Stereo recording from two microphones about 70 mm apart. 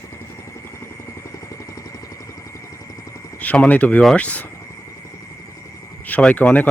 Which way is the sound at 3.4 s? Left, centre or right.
Left.